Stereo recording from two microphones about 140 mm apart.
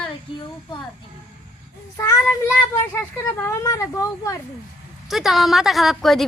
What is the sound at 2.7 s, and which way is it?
Speech, 15° left (ahead or behind).